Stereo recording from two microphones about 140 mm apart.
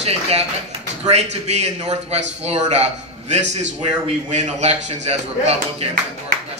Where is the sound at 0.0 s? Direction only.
50° right (ahead or behind).